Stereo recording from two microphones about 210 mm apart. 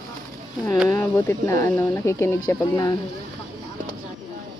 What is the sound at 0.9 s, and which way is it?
Speech, 15° left (ahead or behind).